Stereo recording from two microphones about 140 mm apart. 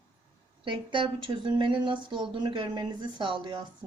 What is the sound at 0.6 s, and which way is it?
Speech, 35° right (ahead or behind).